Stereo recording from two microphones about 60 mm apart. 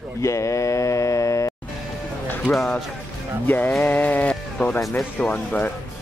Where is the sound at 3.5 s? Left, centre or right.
Left.